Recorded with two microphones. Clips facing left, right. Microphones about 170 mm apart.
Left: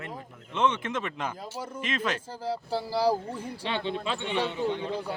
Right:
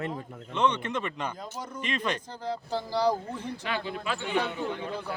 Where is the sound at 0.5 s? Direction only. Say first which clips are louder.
Even; 5° left (ahead or behind).